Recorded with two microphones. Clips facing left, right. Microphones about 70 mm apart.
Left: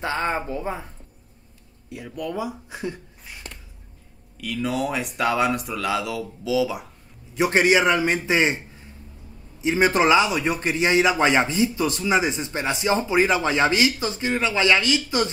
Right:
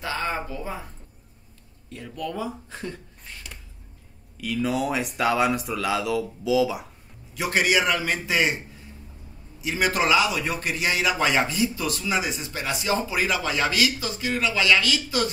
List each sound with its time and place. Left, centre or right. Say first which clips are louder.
0.0 s a sound: left 3 dB; left
0.5 s a man's voice: left 5 dB; left
1.9 s speech: left 2 dB; centre
4.4 s speech: even; centre
7.3 s a man's voice: left 4 dB; left
9.6 s a man's voice: left 5 dB; left